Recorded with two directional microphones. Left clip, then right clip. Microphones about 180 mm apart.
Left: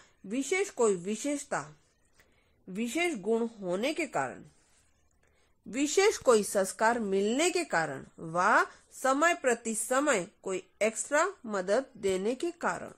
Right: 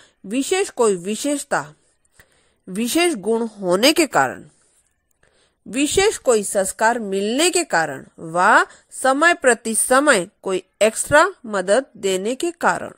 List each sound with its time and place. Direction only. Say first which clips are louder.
0.3 s speech: right 10 dB; 40° right (ahead or behind)
3.7 s a woman's voice: right 17 dB; 60° right (ahead or behind)
5.7 s a woman's voice: right 9 dB; 35° right (ahead or behind)